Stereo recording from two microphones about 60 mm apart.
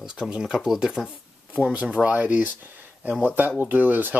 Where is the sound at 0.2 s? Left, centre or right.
Centre.